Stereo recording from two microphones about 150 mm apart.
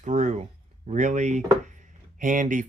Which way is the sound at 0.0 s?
55° right (ahead or behind).